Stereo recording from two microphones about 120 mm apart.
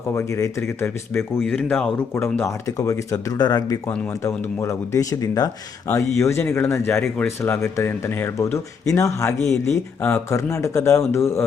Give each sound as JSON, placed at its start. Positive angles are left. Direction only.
{"t": 0.1, "sound": "speech", "side_deg": 25}
{"t": 2.4, "sound": "speech", "side_deg": 25}
{"t": 3.8, "sound": "speech", "side_deg": 25}